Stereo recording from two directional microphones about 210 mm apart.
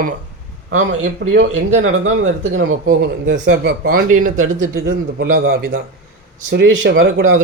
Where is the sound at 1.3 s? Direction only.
70° right (ahead or behind).